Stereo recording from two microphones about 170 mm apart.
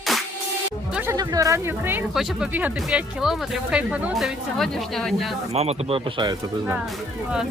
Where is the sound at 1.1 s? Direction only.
20° right (ahead or behind).